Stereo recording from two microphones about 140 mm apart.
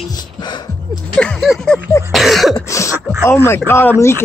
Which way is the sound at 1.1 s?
Centre (ahead or behind).